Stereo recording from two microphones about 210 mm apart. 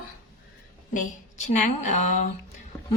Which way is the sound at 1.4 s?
35° left (ahead or behind).